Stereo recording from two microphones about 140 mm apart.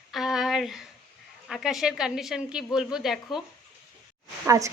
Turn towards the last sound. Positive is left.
turn(degrees=-20)  # may be behind; listen again after turning